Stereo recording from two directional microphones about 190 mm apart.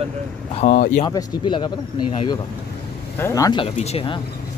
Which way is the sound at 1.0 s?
25° left (ahead or behind).